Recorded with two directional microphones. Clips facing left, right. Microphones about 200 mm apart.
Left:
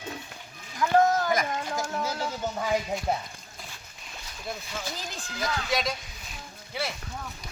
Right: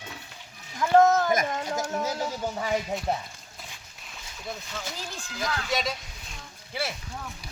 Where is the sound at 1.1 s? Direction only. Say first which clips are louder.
Right 2 dB; 20° right (ahead or behind).